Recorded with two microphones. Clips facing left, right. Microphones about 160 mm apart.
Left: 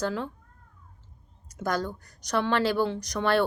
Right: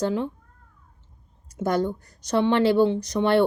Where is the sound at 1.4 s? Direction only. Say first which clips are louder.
Right 6 dB; 25° right (ahead or behind).